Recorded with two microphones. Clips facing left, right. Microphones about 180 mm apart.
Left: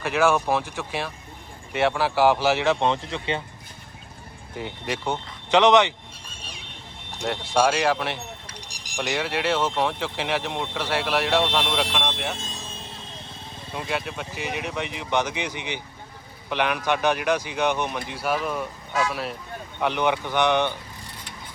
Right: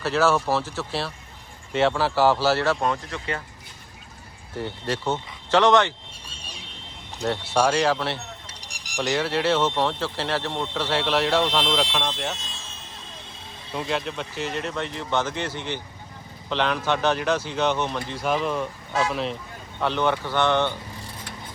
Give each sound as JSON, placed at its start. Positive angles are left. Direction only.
{"t": 0.0, "sound": "speech", "side_deg": 15}
{"t": 2.7, "sound": "speech", "side_deg": 25}
{"t": 4.5, "sound": "speech", "side_deg": 15}
{"t": 7.3, "sound": "speech", "side_deg": 10}
{"t": 12.4, "sound": "speech", "side_deg": 45}
{"t": 13.7, "sound": "speech", "side_deg": 5}